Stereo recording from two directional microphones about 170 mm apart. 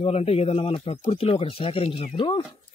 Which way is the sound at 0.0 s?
35° left (ahead or behind).